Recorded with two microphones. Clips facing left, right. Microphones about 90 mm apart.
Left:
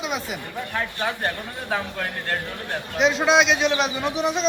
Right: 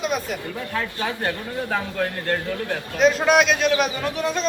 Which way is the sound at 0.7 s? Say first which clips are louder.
Even; 20° left (ahead or behind).